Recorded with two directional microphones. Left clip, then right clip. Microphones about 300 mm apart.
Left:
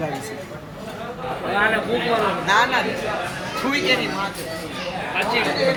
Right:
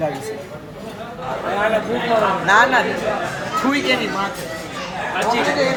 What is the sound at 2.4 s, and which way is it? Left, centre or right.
Speech, right.